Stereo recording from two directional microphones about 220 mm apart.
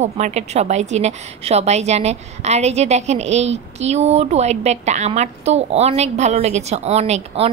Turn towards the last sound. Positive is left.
turn(degrees=-30)  # may be behind; listen again after turning